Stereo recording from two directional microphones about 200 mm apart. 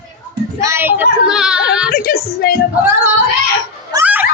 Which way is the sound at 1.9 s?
45° left (ahead or behind).